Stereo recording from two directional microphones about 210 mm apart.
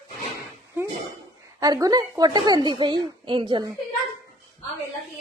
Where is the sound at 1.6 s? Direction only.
20° right (ahead or behind).